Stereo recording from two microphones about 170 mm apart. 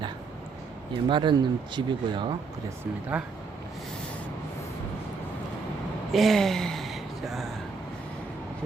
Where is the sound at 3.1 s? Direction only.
5° right (ahead or behind).